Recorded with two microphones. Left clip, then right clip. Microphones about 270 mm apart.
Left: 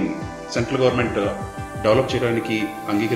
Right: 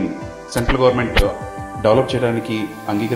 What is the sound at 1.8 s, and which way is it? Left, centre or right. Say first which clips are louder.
Speech: right 3 dB; right.